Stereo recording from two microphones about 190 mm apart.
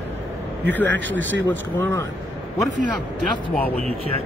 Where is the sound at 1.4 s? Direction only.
10° left (ahead or behind).